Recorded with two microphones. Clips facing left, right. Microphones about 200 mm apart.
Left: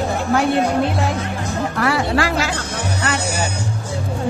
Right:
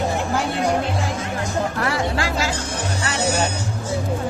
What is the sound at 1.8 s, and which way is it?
Music, 70° left (ahead or behind).